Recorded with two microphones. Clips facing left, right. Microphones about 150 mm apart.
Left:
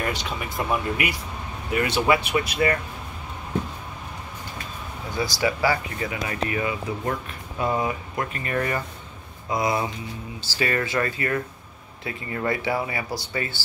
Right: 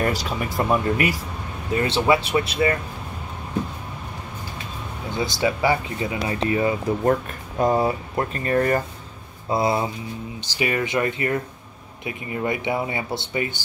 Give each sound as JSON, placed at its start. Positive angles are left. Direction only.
{"t": 0.0, "sound": "speech", "side_deg": -40}
{"t": 1.7, "sound": "speech", "side_deg": -30}
{"t": 5.1, "sound": "speech", "side_deg": -25}
{"t": 10.4, "sound": "speech", "side_deg": -15}